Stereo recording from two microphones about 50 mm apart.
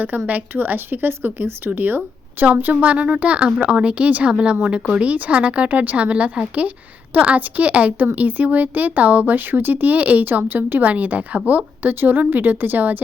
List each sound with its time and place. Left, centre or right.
0.5 s speech: right
2.8 s a woman's voice: right